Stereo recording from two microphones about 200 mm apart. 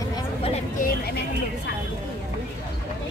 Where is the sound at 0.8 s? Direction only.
50° left (ahead or behind).